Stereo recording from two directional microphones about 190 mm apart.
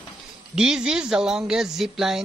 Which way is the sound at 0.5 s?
5° right (ahead or behind).